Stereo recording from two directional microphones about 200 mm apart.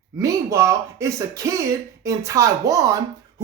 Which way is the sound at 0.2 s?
15° right (ahead or behind).